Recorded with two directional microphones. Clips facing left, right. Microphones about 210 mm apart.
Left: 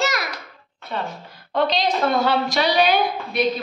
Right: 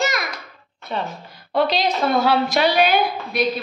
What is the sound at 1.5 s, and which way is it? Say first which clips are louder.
A woman's voice: right 1 dB; 5° right (ahead or behind).